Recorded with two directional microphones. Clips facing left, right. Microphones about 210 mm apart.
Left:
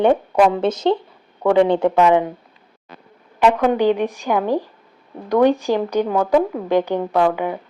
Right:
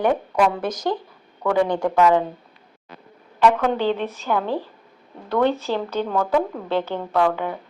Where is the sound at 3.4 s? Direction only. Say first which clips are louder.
Left 3 dB; 15° left (ahead or behind).